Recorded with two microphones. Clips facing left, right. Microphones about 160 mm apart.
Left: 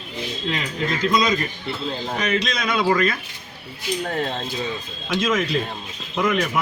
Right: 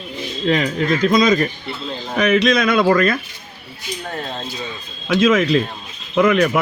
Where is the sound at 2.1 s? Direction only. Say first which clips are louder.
Right 11 dB; 65° right (ahead or behind).